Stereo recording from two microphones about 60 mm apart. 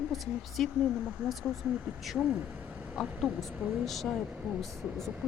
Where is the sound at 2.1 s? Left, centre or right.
Right.